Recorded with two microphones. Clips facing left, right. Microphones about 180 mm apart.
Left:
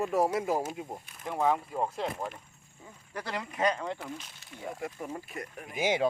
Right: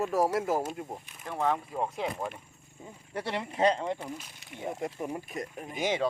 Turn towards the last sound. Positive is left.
turn(degrees=10)  # may be behind; listen again after turning